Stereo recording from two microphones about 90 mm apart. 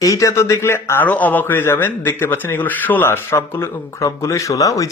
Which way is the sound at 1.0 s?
15° left (ahead or behind).